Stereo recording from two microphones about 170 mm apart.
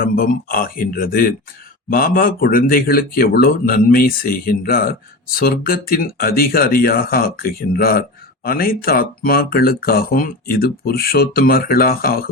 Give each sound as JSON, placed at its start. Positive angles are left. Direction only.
{"t": 0.0, "sound": "a man's voice", "side_deg": 55}